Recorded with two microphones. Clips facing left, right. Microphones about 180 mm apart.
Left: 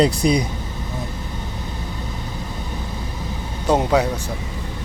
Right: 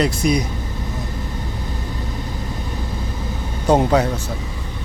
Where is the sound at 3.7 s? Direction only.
5° left (ahead or behind).